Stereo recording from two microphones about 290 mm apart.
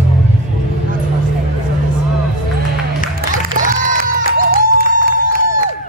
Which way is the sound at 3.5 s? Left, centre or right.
Right.